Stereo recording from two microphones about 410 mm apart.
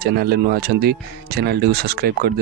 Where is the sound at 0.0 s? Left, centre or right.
Right.